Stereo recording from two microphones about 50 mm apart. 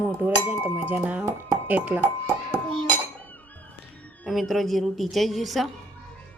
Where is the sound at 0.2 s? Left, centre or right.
Right.